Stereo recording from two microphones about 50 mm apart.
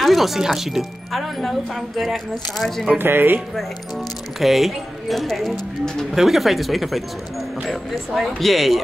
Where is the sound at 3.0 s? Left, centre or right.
Right.